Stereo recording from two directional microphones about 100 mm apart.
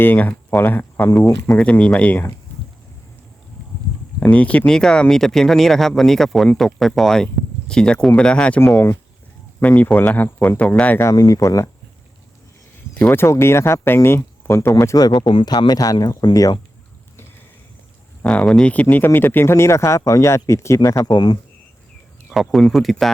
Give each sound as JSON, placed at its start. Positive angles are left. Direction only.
{"t": 0.0, "sound": "speech", "side_deg": 20}
{"t": 4.2, "sound": "speech", "side_deg": 15}
{"t": 11.0, "sound": "speech", "side_deg": 40}
{"t": 12.9, "sound": "speech", "side_deg": 20}
{"t": 14.9, "sound": "speech", "side_deg": 45}
{"t": 15.4, "sound": "speech", "side_deg": 40}
{"t": 18.2, "sound": "speech", "side_deg": 15}
{"t": 18.7, "sound": "speech", "side_deg": 15}
{"t": 21.1, "sound": "speech", "side_deg": 45}
{"t": 22.3, "sound": "speech", "side_deg": 0}